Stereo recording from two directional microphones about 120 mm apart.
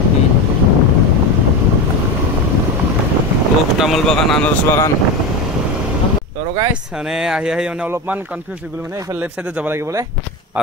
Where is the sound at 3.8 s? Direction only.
Centre (ahead or behind).